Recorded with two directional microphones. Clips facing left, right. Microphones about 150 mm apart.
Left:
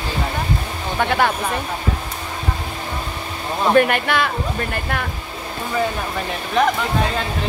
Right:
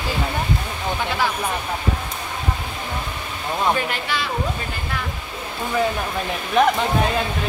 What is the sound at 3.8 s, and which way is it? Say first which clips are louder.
Speech: left 9 dB; 60° left (ahead or behind).